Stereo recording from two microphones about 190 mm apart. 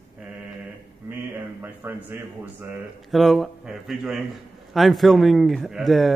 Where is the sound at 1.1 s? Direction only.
10° right (ahead or behind).